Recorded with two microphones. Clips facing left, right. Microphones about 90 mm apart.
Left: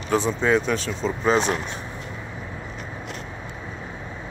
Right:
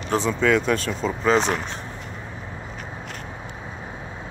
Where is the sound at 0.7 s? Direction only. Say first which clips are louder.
Right 1 dB; 45° right (ahead or behind).